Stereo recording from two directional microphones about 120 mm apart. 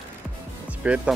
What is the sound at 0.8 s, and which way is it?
Speech, 10° right (ahead or behind).